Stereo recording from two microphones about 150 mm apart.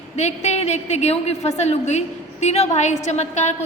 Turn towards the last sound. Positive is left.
turn(degrees=50)  # may be behind; listen again after turning